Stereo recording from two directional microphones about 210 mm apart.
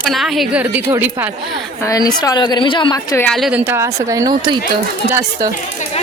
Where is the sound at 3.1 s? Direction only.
5° left (ahead or behind); by 4.6 s 15° right (ahead or behind).